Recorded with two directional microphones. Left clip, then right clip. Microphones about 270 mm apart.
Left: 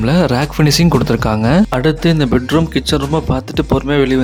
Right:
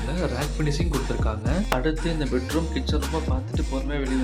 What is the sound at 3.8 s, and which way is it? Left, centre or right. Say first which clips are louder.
Speech: left 15 dB; left.